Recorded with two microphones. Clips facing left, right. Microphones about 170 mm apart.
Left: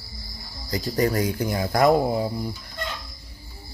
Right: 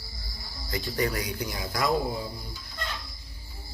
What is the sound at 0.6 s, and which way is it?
Speech, 40° left (ahead or behind).